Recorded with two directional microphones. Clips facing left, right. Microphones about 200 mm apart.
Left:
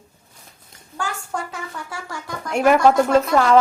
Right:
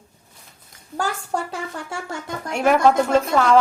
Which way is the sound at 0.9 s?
35° right (ahead or behind).